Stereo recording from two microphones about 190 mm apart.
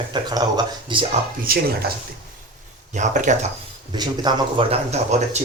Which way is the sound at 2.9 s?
40° right (ahead or behind).